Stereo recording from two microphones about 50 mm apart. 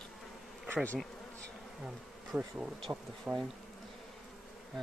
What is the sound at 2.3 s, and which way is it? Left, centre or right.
Bee, right.